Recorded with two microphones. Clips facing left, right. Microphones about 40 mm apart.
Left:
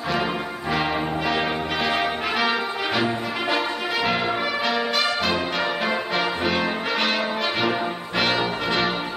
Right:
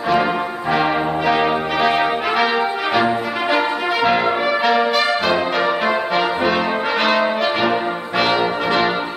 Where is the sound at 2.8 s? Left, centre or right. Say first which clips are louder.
Right 6 dB; centre.